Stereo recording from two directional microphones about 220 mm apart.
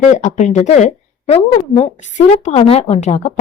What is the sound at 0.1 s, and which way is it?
A woman's voice, 35° left (ahead or behind).